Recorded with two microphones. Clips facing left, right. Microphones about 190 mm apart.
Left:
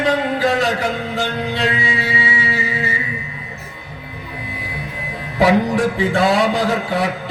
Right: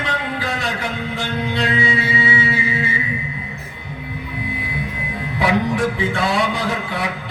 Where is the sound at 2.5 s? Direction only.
40° left (ahead or behind).